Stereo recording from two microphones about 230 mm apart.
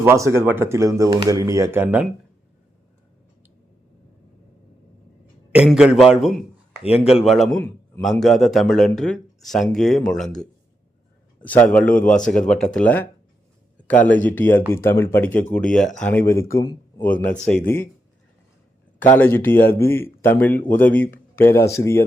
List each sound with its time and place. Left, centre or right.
0.0 s speech: centre
5.5 s a man's voice: centre
6.8 s speech: left
7.3 s a man's voice: centre
14.1 s a man's voice: centre
19.1 s speech: centre